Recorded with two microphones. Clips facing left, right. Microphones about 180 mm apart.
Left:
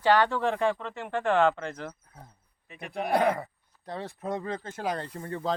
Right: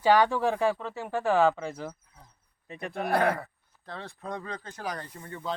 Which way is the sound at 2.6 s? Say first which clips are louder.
Right 5 dB; 35° right (ahead or behind).